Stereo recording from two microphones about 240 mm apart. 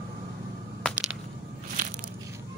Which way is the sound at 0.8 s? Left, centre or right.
Centre.